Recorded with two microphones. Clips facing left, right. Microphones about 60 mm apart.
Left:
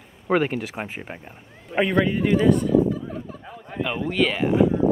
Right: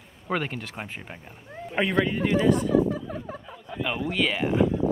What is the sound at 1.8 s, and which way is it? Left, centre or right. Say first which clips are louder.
Speech: left 3 dB; centre.